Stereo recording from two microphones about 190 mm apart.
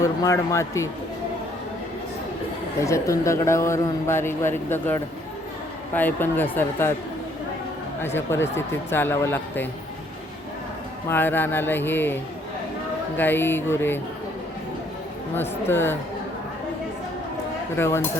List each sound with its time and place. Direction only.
0.0 s speech: 15° left (ahead or behind)
2.8 s speech: 15° left (ahead or behind)
8.0 s speech: 10° left (ahead or behind)
11.1 s speech: 10° left (ahead or behind)
15.4 s speech: 10° left (ahead or behind)
17.7 s speech: 15° left (ahead or behind)